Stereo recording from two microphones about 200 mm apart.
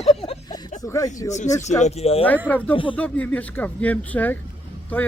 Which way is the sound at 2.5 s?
5° left (ahead or behind).